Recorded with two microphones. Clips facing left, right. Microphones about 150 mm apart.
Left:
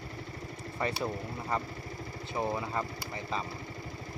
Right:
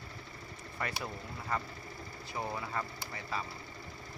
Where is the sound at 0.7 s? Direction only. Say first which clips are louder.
Left 6 dB; 25° left (ahead or behind).